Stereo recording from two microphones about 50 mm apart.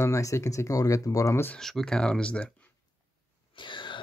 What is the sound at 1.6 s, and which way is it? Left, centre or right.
Speech, centre.